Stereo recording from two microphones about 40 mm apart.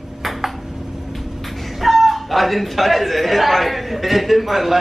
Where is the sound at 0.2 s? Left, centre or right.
Centre.